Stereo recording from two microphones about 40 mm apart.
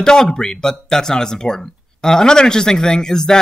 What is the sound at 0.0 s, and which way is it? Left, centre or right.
Speech, centre.